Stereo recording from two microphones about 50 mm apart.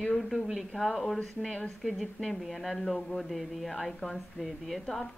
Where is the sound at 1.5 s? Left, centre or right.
Left.